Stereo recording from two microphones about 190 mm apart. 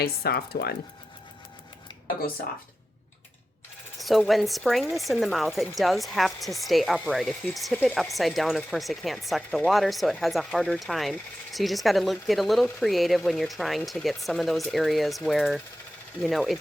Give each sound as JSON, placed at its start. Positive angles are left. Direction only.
{"t": 0.0, "sound": "speech", "side_deg": 55}
{"t": 3.9, "sound": "speech", "side_deg": 0}